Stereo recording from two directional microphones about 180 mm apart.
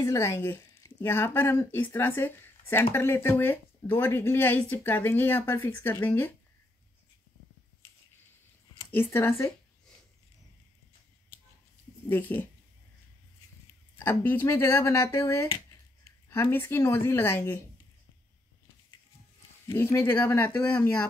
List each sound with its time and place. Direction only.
0.0 s speech: 15° left (ahead or behind)
8.7 s speech: 15° left (ahead or behind)
12.1 s speech: 10° left (ahead or behind)
13.9 s speech: 10° left (ahead or behind)
15.4 s a sound: 30° left (ahead or behind)
16.3 s speech: 10° left (ahead or behind)
19.7 s speech: 10° left (ahead or behind)